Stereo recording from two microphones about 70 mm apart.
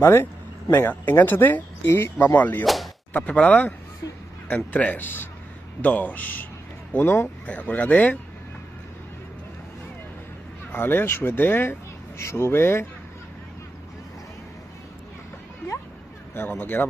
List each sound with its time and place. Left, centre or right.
0.0 s speech: left
2.6 s speech: centre
3.1 s speech: left
4.7 s speech: left
10.7 s speech: left
16.3 s speech: left